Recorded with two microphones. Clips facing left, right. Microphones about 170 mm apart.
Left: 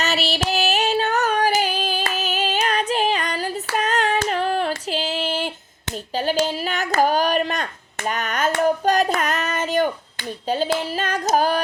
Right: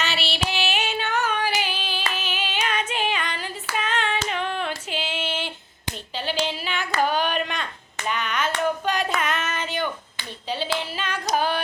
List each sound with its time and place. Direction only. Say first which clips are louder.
0.0 s female singing: left 5 dB; 40° left (ahead or behind)
6.1 s a sound: left 6 dB; 45° left (ahead or behind)
11.3 s female singing: left 4 dB; 40° left (ahead or behind)